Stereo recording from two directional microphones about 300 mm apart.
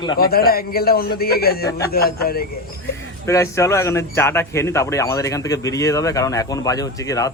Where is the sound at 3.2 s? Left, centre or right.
Centre.